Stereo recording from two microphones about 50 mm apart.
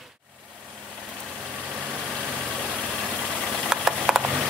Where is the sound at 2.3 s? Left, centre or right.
Right.